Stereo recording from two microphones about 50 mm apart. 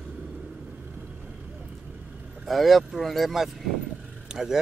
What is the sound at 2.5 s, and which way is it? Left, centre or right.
Speech, centre.